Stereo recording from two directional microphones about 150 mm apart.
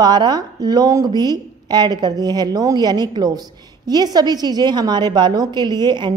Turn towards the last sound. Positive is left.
turn(degrees=-30)  # may be behind; listen again after turning